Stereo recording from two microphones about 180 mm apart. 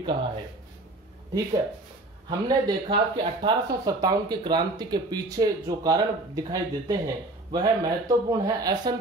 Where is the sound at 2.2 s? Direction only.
25° right (ahead or behind).